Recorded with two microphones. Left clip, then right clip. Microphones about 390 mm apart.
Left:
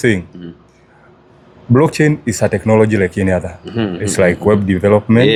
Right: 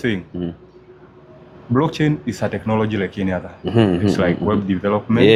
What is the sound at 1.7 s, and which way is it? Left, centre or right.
Speech, left.